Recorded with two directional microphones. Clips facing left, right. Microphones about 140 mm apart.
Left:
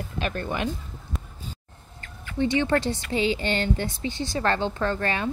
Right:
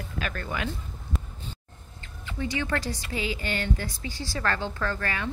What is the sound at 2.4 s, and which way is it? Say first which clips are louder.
A woman's voice: left 7 dB; 25° left (ahead or behind).